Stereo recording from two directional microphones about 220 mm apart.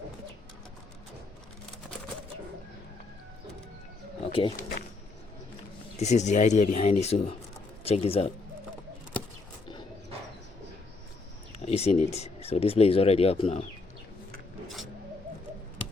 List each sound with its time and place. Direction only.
4.2 s pigeon: 25° left (ahead or behind)
6.0 s speech: 30° left (ahead or behind)
11.6 s speech: 30° left (ahead or behind)